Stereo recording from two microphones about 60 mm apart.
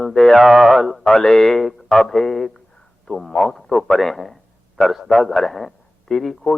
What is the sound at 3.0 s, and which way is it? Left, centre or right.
A man's voice, centre.